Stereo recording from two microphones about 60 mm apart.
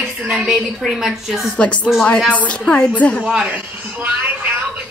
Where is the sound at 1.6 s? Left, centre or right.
Left.